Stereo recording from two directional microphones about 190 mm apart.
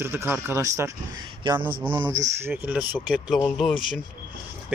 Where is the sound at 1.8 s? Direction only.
10° right (ahead or behind).